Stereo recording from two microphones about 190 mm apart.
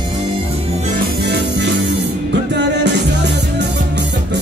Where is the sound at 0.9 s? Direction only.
60° right (ahead or behind).